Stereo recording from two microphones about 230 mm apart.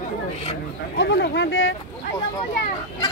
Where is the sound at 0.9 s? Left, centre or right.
Left.